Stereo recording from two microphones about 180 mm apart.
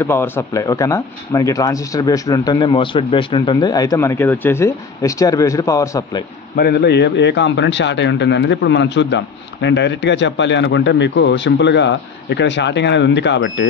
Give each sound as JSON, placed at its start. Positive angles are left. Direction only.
{"t": 0.0, "sound": "speech", "side_deg": 15}
{"t": 6.5, "sound": "a man's voice", "side_deg": 60}